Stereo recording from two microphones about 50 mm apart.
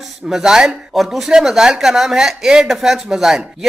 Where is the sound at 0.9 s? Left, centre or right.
Centre.